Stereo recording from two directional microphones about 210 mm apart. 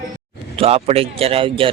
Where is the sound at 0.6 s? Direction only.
30° right (ahead or behind).